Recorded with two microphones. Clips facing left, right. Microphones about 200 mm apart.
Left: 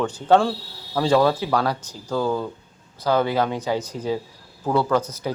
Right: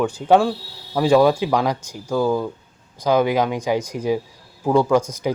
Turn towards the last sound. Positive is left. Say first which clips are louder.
# right 4 dB
turn(degrees=-10)  # may be behind; listen again after turning